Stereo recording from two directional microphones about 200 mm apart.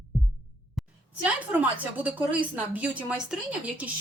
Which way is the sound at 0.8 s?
Centre (ahead or behind).